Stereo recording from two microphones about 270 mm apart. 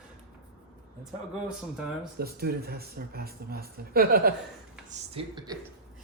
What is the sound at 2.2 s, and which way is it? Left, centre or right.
Speech, right.